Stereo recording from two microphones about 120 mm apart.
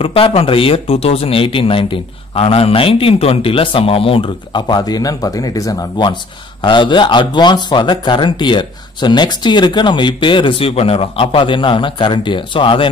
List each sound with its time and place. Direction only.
0.0 s speech: 50° left (ahead or behind); by 5.9 s 30° left (ahead or behind)
6.6 s speech: 40° left (ahead or behind)